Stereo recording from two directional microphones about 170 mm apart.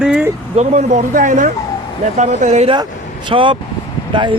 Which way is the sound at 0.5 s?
40° right (ahead or behind).